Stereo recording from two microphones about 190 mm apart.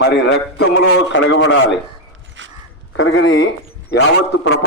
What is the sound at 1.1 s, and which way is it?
Speech, 75° left (ahead or behind).